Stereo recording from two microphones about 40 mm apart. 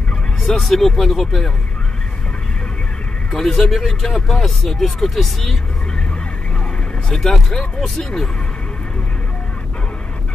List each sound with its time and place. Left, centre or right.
0.4 s speech: centre
3.3 s speech: centre
7.1 s speech: centre